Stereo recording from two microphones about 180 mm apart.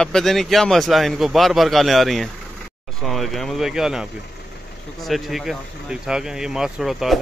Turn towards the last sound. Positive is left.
turn(degrees=0)  # may be behind; listen again after turning